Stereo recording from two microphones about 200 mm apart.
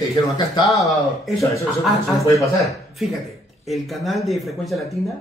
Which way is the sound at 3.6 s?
Centre (ahead or behind).